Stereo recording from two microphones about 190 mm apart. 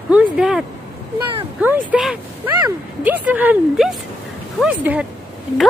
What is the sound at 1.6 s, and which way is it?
Speech, 10° right (ahead or behind).